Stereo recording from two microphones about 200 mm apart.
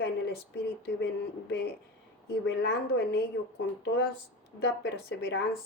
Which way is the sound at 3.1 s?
60° left (ahead or behind).